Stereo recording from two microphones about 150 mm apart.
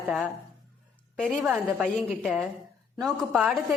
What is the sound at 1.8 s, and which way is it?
A woman's voice, centre (ahead or behind).